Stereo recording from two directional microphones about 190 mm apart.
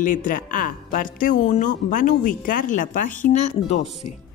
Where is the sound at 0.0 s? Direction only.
45° left (ahead or behind).